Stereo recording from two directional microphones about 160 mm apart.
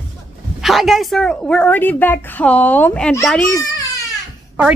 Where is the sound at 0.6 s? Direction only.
Centre (ahead or behind).